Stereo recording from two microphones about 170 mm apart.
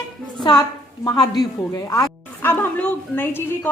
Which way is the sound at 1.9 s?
15° left (ahead or behind).